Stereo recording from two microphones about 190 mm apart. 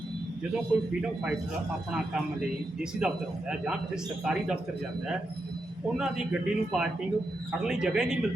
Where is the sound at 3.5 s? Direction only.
5° right (ahead or behind).